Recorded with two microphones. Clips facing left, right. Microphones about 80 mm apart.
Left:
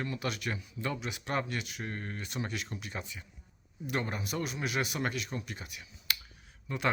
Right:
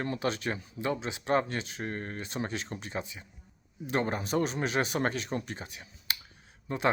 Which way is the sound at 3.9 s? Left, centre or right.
Right.